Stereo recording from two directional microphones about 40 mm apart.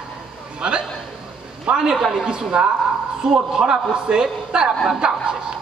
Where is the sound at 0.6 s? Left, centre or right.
Right.